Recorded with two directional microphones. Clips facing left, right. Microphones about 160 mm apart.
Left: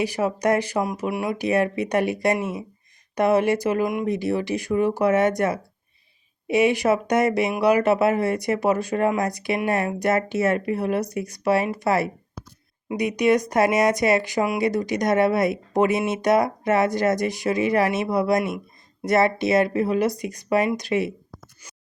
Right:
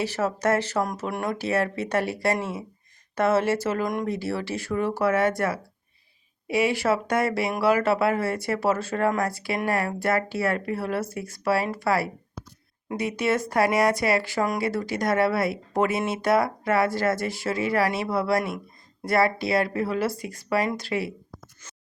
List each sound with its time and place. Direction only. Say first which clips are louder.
0.0 s speech: left 3 dB; 15° left (ahead or behind)
1.5 s speech: left 5 dB; 15° left (ahead or behind)